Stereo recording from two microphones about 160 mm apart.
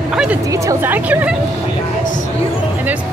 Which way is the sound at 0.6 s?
10° right (ahead or behind).